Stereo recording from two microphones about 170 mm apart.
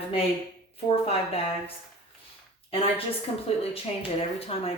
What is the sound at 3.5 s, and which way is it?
Speech, 35° left (ahead or behind).